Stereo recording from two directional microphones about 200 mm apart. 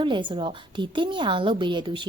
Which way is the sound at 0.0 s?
25° right (ahead or behind).